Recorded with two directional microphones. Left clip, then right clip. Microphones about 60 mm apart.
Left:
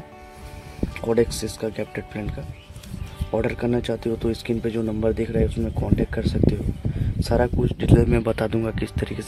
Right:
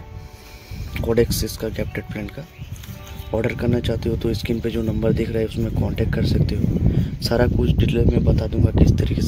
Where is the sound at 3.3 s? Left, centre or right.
Centre.